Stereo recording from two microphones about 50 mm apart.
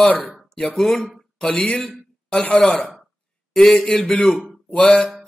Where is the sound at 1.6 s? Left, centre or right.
Left.